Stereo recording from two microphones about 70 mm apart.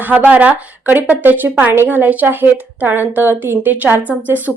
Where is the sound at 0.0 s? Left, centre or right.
Right.